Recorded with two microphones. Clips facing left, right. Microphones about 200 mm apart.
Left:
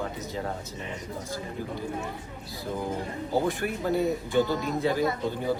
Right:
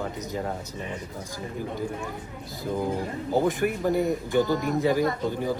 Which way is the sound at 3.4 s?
15° right (ahead or behind).